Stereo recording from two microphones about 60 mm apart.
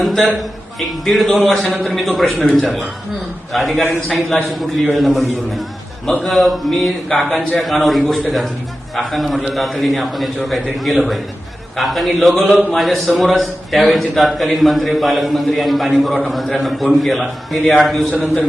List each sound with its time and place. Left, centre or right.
0.0 s a man's voice: centre